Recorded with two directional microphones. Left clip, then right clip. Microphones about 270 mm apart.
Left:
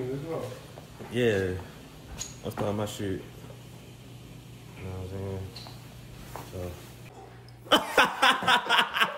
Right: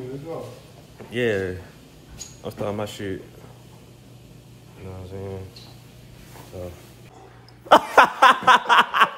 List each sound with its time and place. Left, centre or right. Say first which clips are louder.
1.1 s speech: right 3 dB; centre
5.1 s speech: right 4 dB; centre
6.5 s speech: right 4 dB; centre
7.6 s a sound: right 9 dB; centre